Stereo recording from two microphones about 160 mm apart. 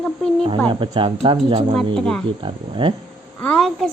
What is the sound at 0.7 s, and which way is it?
Speech, 30° right (ahead or behind).